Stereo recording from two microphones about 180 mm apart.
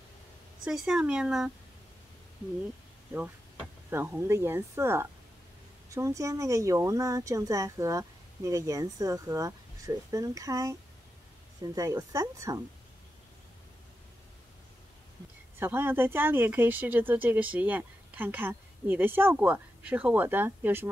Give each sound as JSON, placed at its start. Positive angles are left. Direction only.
{"t": 0.7, "sound": "speech", "side_deg": -5}
{"t": 3.9, "sound": "speech", "side_deg": -10}
{"t": 15.6, "sound": "speech", "side_deg": -10}